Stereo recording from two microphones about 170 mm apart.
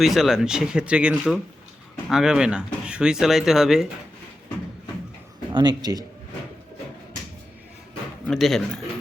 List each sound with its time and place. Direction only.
0.0 s speech: centre (ahead or behind)
5.5 s a man's voice: 25° right (ahead or behind)
8.3 s speech: centre (ahead or behind)